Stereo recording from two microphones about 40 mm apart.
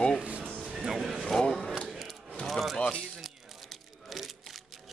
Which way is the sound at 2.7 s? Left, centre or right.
Left.